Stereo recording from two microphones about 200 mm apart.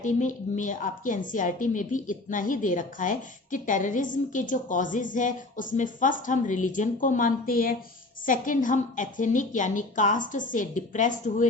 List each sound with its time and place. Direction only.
0.0 s a woman's voice: 40° left (ahead or behind)